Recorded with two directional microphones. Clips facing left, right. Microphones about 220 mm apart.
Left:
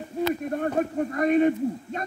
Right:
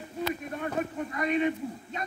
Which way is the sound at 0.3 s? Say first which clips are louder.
Left 8 dB; 45° left (ahead or behind).